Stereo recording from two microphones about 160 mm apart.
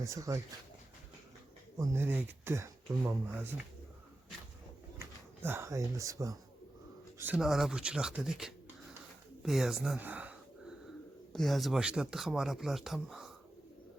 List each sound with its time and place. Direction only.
0.0 s speech: 20° right (ahead or behind)
1.8 s speech: 15° right (ahead or behind)
4.9 s speech: 15° right (ahead or behind)
7.2 s speech: 5° right (ahead or behind)
11.3 s speech: centre (ahead or behind)